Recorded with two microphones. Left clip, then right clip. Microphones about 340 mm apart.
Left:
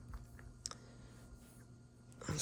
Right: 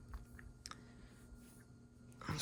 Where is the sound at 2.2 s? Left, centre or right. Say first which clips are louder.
Even; centre.